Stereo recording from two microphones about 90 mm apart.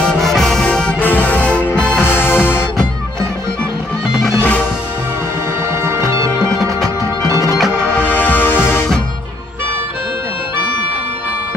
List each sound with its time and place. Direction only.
0.0 s music: 5° left (ahead or behind)
0.9 s music: 20° left (ahead or behind)
2.0 s music: 25° left (ahead or behind)
4.4 s music: 20° left (ahead or behind)
5.7 s music: 30° right (ahead or behind)
7.5 s music: 5° left (ahead or behind)
8.0 s music: 20° left (ahead or behind)